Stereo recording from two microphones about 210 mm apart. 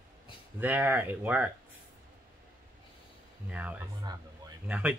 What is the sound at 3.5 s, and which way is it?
Speech, 5° right (ahead or behind).